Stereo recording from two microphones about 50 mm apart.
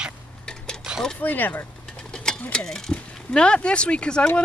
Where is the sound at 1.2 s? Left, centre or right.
Left.